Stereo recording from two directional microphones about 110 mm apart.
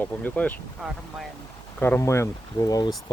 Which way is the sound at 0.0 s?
15° left (ahead or behind).